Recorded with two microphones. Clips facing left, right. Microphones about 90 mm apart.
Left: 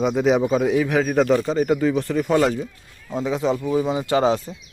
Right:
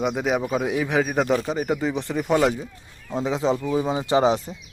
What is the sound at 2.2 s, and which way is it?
Speech, 5° right (ahead or behind).